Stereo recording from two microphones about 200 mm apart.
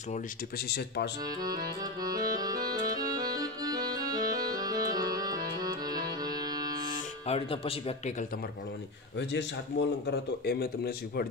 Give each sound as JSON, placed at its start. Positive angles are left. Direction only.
{"t": 0.7, "sound": "speech", "side_deg": 55}
{"t": 2.0, "sound": "accordion", "side_deg": -20}
{"t": 7.2, "sound": "speech", "side_deg": 30}
{"t": 9.3, "sound": "speech", "side_deg": 60}